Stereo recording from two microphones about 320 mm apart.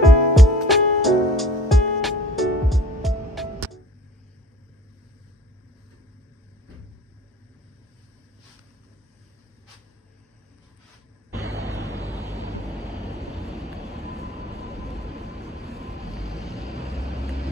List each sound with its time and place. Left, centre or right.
0.0 s music: centre
11.3 s a sound: centre
11.6 s waves: centre
13.4 s vehicle: centre
14.3 s vehicle: centre
16.2 s vehicle: centre
16.6 s vehicle: centre